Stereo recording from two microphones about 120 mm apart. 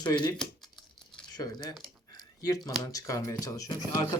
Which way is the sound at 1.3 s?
35° left (ahead or behind).